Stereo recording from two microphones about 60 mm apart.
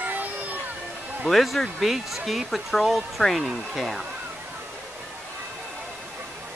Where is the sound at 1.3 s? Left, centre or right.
Centre.